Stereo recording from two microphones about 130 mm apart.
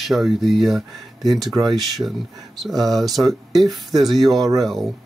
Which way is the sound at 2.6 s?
Centre (ahead or behind).